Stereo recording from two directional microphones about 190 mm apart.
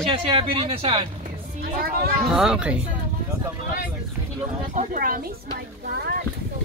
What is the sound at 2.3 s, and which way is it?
Speech, 5° right (ahead or behind).